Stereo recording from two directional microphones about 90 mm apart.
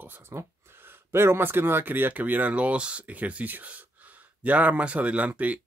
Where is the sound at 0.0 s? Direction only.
25° right (ahead or behind).